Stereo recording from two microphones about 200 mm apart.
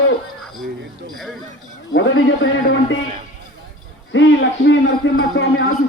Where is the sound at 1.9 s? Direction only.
70° left (ahead or behind).